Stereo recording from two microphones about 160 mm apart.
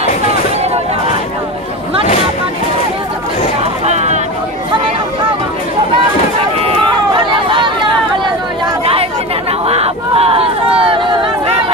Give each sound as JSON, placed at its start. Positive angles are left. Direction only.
{"t": 3.8, "sound": "hubbub", "side_deg": -45}
{"t": 6.6, "sound": "chatter", "side_deg": -35}
{"t": 9.5, "sound": "a sound", "side_deg": -40}